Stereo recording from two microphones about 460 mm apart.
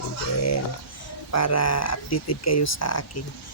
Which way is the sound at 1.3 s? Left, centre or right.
Left.